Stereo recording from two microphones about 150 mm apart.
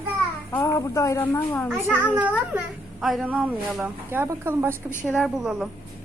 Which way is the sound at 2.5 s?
Centre (ahead or behind).